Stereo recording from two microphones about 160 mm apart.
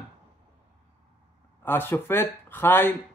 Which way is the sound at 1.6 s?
15° left (ahead or behind).